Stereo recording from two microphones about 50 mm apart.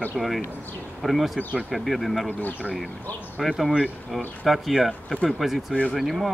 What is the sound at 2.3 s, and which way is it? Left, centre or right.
Speech, left.